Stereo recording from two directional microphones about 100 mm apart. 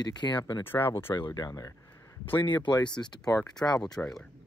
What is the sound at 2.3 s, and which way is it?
Speech, 55° left (ahead or behind).